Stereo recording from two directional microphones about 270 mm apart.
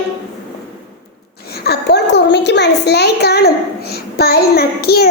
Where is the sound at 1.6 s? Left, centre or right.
Left.